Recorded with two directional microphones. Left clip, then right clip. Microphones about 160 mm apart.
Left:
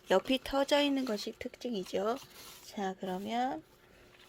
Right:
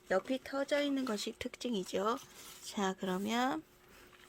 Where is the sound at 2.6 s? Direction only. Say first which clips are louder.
Right 1 dB; 20° right (ahead or behind).